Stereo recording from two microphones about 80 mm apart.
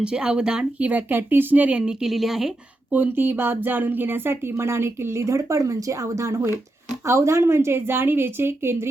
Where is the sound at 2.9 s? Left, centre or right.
Right.